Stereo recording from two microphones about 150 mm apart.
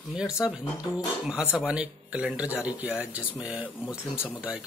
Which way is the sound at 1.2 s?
5° right (ahead or behind).